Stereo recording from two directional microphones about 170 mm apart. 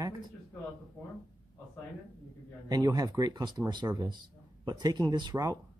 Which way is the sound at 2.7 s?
25° right (ahead or behind).